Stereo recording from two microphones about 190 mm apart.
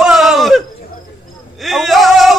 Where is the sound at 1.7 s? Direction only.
Centre (ahead or behind).